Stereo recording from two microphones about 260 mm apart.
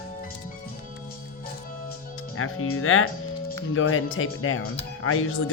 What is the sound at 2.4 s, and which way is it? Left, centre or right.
Speech, left.